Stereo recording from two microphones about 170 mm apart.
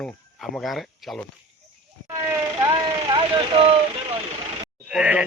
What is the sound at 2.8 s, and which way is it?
Speech, 30° right (ahead or behind).